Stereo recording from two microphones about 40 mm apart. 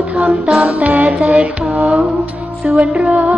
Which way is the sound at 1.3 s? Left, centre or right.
Right.